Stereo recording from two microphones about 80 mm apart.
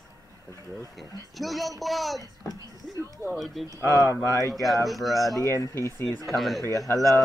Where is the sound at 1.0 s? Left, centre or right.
Centre.